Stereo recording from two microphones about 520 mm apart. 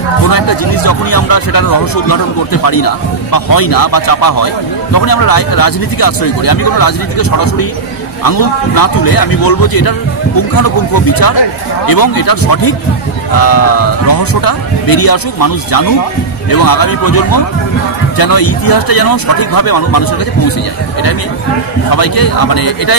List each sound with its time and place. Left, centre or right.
0.2 s speech: left
21.9 s speech: left